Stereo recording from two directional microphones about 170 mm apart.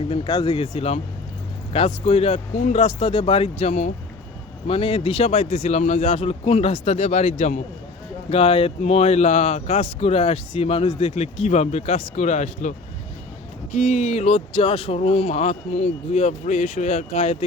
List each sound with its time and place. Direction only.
0.1 s speech: 30° left (ahead or behind)